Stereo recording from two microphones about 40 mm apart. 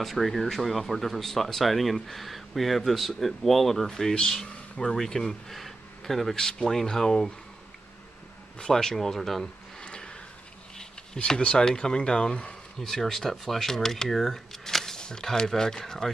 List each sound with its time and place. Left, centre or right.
0.0 s speech: centre
8.7 s speech: centre
9.8 s a sound: left
11.1 s speech: left